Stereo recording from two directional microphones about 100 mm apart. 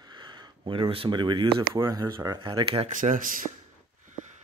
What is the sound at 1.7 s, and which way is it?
Speech, 35° right (ahead or behind).